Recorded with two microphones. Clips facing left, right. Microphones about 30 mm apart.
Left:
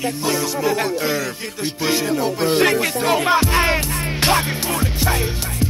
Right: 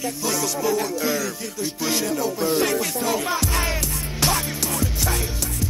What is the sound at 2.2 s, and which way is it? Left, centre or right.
Music, left.